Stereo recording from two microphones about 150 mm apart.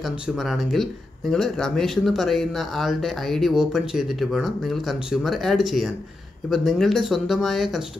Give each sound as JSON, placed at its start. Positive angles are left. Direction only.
{"t": 0.4, "sound": "speech", "side_deg": 0}